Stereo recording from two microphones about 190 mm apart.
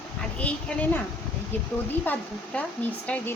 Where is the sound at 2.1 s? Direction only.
5° left (ahead or behind).